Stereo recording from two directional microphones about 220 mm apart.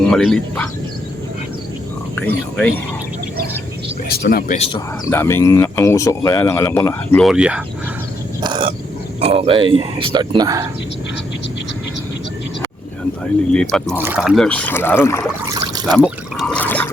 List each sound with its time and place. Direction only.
0.0 s speech: centre (ahead or behind)
2.1 s speech: 5° left (ahead or behind)
4.1 s speech: 45° left (ahead or behind)
5.0 s speech: 10° left (ahead or behind)
7.3 s speech: 5° right (ahead or behind)
8.4 s a sound: 20° right (ahead or behind)
9.2 s speech: 25° right (ahead or behind)
13.5 s speech: 5° left (ahead or behind)
15.5 s trickle: 15° right (ahead or behind)
16.0 s speech: centre (ahead or behind)
16.6 s water: 10° left (ahead or behind)